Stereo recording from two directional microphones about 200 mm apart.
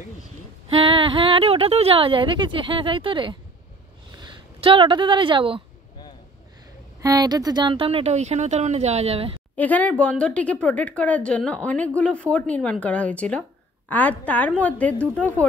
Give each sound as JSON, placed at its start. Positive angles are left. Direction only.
{"t": 0.7, "sound": "a woman's voice", "side_deg": -25}
{"t": 7.0, "sound": "a woman's voice", "side_deg": -20}
{"t": 9.6, "sound": "a woman's voice", "side_deg": 10}